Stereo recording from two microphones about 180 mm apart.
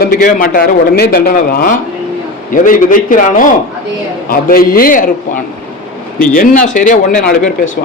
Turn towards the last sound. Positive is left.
turn(degrees=45)  # may be behind; listen again after turning